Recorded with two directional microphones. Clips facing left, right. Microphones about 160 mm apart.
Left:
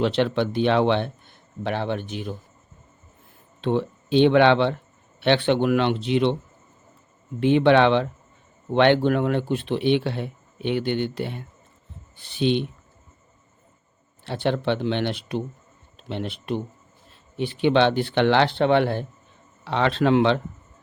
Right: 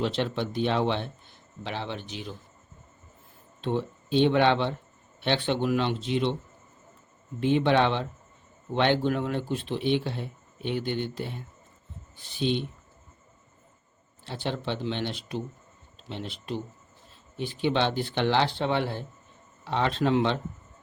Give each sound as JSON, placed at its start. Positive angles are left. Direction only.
{"t": 0.0, "sound": "speech", "side_deg": 70}
{"t": 3.6, "sound": "speech", "side_deg": 80}
{"t": 7.3, "sound": "speech", "side_deg": 70}
{"t": 14.3, "sound": "speech", "side_deg": 65}
{"t": 19.6, "sound": "speech", "side_deg": 80}